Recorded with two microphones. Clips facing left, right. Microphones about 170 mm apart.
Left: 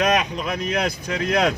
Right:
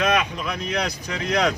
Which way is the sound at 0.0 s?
45° left (ahead or behind).